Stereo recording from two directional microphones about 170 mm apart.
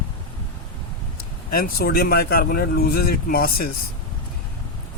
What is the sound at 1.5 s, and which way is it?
Speech, 60° left (ahead or behind).